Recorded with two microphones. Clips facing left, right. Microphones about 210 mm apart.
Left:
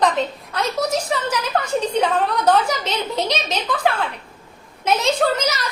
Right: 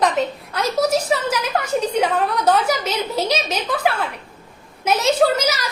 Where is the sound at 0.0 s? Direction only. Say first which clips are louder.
Even; 10° right (ahead or behind).